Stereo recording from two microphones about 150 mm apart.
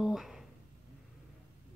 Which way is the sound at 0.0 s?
Centre (ahead or behind).